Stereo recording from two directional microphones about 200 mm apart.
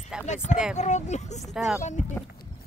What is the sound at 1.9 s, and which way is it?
Speech, 35° left (ahead or behind).